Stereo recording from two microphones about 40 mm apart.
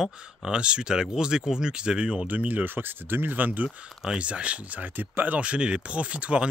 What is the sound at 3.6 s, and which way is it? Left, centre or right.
Speech, centre.